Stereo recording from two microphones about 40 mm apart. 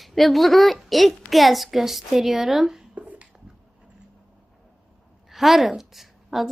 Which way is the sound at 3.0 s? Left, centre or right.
Right.